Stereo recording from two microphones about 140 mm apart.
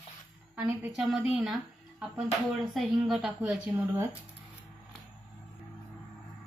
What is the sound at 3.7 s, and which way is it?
Speech, 15° right (ahead or behind).